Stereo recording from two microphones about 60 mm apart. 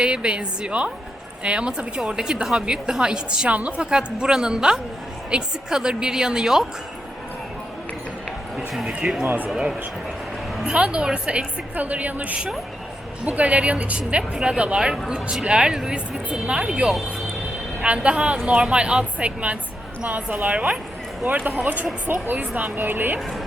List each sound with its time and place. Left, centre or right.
0.0 s a woman's voice: centre
3.8 s speech: centre
8.5 s a woman's voice: centre; by 23.2 s right